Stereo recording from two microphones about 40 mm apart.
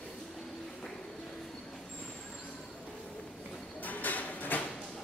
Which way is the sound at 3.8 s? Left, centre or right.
Left.